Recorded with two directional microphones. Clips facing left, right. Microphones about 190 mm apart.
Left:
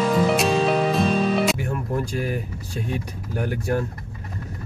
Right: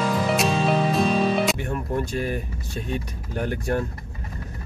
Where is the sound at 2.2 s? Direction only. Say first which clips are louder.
Left 1 dB; 10° left (ahead or behind).